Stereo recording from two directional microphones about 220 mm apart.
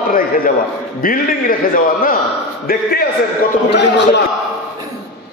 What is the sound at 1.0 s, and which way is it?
A man's voice, 40° left (ahead or behind).